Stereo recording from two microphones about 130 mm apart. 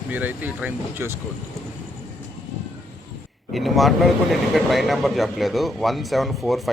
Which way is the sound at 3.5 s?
Centre (ahead or behind).